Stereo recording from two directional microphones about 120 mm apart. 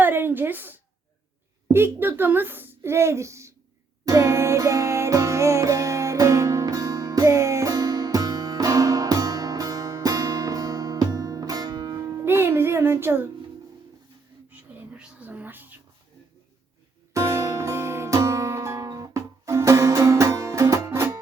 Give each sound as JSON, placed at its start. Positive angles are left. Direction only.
{"t": 0.0, "sound": "a sound", "side_deg": -15}
{"t": 1.6, "sound": "a woman's voice", "side_deg": -20}
{"t": 4.0, "sound": "music", "side_deg": -25}
{"t": 14.5, "sound": "whispering", "side_deg": -15}
{"t": 17.2, "sound": "music", "side_deg": -25}